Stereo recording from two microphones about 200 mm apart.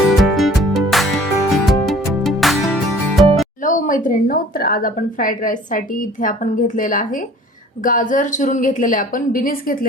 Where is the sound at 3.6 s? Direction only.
40° left (ahead or behind).